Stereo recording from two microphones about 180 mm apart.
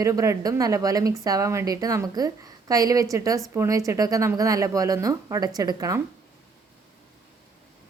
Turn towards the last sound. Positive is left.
turn(degrees=-20)  # may be behind; listen again after turning